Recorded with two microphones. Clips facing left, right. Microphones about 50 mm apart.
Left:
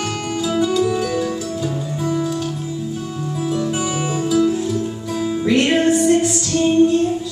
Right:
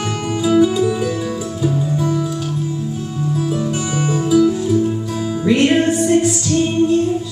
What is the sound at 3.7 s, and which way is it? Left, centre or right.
Music, centre.